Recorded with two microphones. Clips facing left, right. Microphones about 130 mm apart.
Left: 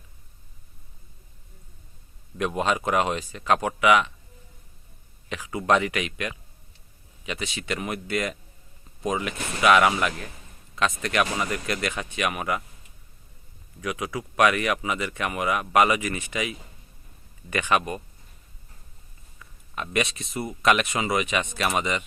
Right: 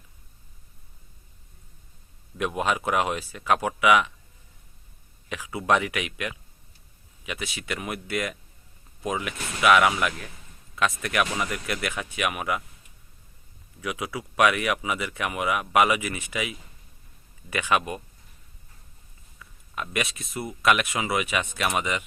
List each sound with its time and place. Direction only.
2.4 s speech: 10° right (ahead or behind)
5.3 s speech: 10° right (ahead or behind)
13.8 s speech: 10° right (ahead or behind)
19.7 s speech: 5° right (ahead or behind)